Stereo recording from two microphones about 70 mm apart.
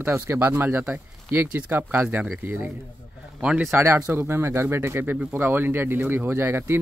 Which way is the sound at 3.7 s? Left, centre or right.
Right.